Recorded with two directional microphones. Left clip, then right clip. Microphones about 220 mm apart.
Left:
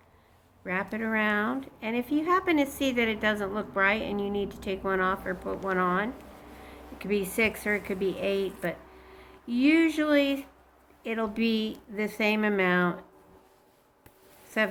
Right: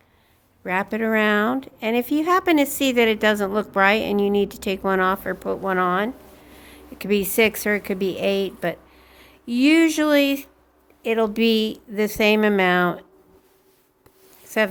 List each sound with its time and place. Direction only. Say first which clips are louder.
0.6 s speech: right 8 dB; 50° right (ahead or behind)